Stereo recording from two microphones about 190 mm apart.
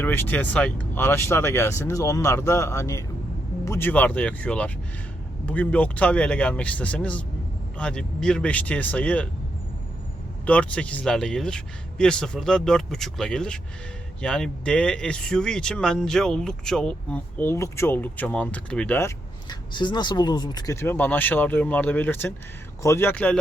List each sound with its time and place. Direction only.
0.0 s speech: 10° left (ahead or behind)
10.4 s speech: 5° left (ahead or behind)